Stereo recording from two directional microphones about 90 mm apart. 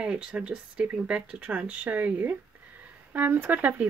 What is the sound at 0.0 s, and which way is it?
Speech, 10° right (ahead or behind).